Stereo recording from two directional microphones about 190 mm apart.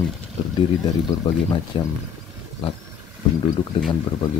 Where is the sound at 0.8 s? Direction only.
20° left (ahead or behind).